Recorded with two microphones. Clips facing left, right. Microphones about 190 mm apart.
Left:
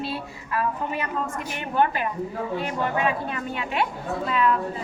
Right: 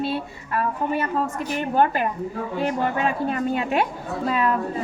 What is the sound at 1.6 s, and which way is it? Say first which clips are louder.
A woman's voice: right 3 dB; 45° right (ahead or behind).